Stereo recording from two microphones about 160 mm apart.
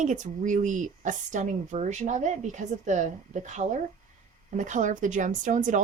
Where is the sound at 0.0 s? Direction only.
50° right (ahead or behind).